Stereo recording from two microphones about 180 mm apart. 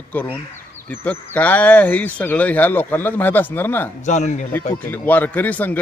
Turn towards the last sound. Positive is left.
turn(degrees=10)  # may be behind; listen again after turning